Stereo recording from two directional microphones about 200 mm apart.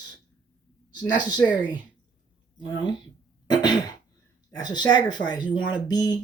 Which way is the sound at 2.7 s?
20° left (ahead or behind).